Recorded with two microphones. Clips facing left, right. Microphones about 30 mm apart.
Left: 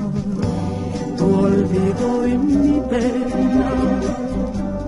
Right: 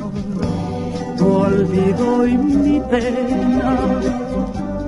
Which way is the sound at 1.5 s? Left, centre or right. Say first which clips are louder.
Right 2 dB; centre.